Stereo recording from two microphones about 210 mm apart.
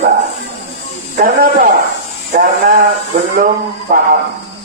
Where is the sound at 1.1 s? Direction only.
40° right (ahead or behind).